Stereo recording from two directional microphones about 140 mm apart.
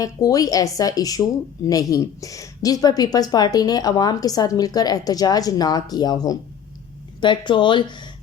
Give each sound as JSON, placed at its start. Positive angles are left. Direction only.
{"t": 0.0, "sound": "speech", "side_deg": 25}